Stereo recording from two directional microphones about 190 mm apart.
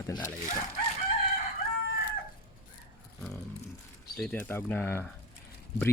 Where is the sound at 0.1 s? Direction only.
10° left (ahead or behind).